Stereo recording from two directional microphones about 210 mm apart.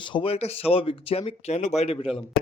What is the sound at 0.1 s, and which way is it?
Speech, 25° left (ahead or behind).